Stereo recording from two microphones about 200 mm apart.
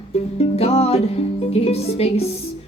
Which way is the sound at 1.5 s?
30° left (ahead or behind).